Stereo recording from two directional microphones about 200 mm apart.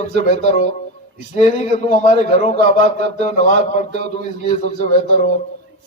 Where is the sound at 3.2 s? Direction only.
35° left (ahead or behind).